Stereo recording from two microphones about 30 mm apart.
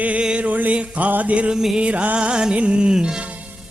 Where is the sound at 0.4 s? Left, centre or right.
Right.